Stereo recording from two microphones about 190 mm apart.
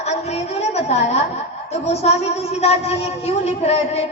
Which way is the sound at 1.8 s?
35° left (ahead or behind).